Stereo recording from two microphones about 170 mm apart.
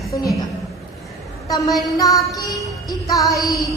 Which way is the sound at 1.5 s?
20° left (ahead or behind).